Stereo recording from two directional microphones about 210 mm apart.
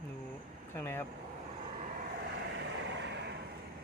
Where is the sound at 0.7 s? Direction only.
10° left (ahead or behind).